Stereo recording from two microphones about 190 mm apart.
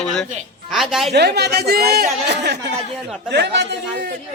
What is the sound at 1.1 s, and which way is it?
Speech, 60° right (ahead or behind).